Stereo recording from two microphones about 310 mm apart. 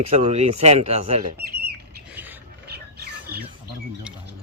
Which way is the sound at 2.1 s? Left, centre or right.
Centre.